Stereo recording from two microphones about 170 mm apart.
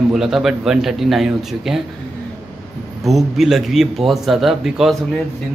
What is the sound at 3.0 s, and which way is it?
A man's voice, centre (ahead or behind).